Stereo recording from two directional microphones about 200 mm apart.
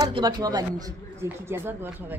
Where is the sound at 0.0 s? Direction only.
20° right (ahead or behind).